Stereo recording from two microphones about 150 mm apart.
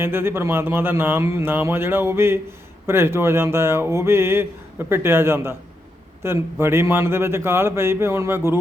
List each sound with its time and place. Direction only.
0.0 s speech: 15° right (ahead or behind)